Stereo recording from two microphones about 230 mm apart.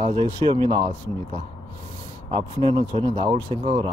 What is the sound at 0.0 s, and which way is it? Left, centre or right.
Speech, right.